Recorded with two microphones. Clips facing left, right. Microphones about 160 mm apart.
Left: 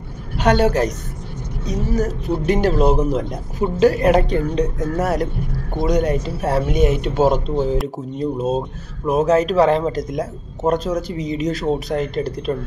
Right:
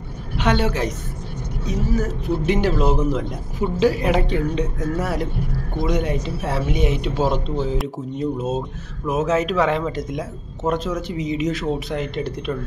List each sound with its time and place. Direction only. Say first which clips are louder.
0.4 s speech: left 5 dB; 40° left (ahead or behind)